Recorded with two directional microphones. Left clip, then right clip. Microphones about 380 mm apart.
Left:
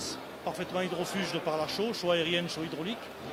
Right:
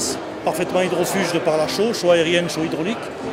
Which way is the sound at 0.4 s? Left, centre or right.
Left.